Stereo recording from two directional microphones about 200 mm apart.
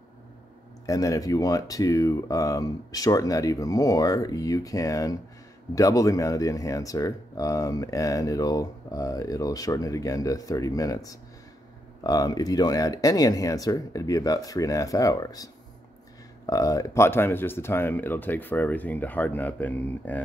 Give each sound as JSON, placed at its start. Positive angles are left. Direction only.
{"t": 0.8, "sound": "speech", "side_deg": 15}